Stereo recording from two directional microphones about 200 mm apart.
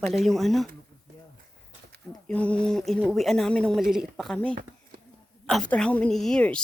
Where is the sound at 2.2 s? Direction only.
5° left (ahead or behind).